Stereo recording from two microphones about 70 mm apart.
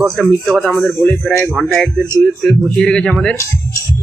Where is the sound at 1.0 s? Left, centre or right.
Left.